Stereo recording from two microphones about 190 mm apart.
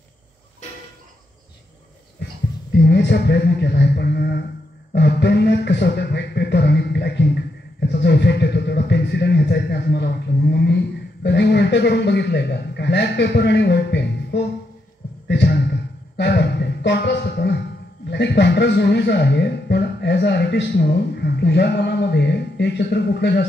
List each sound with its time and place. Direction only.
2.8 s speech: 60° left (ahead or behind)
15.2 s a sound: 65° left (ahead or behind)
18.1 s speech: 65° left (ahead or behind)